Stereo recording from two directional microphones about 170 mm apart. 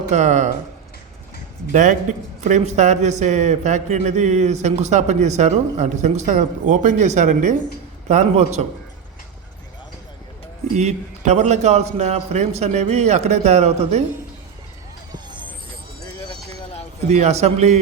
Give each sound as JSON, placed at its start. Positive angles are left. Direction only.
{"t": 0.1, "sound": "a man's voice", "side_deg": -45}
{"t": 1.7, "sound": "a man's voice", "side_deg": -45}
{"t": 10.8, "sound": "a man's voice", "side_deg": -40}
{"t": 15.1, "sound": "vehicle", "side_deg": -25}
{"t": 17.1, "sound": "a man's voice", "side_deg": -40}